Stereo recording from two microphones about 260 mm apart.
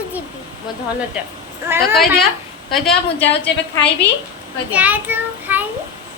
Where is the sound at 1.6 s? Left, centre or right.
Centre.